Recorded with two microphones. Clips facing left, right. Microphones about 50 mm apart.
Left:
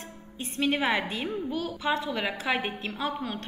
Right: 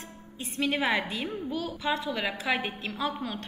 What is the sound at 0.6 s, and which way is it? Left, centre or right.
A woman's voice, centre.